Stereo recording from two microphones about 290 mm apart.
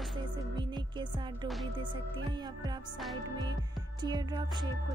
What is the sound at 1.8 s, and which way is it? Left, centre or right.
Music, centre.